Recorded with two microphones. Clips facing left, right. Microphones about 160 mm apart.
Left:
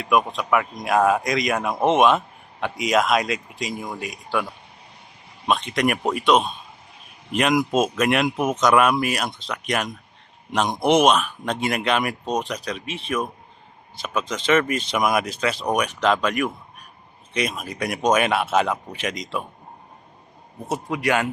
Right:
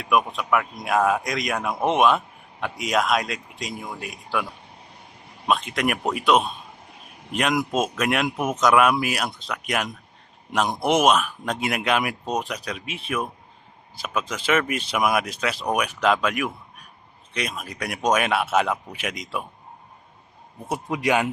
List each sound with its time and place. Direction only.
0.0 s speech: centre (ahead or behind)
5.5 s speech: 5° right (ahead or behind)
20.7 s a man's voice: 15° right (ahead or behind)